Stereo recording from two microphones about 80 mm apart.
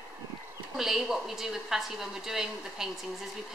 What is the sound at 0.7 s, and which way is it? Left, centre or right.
A woman's voice, centre.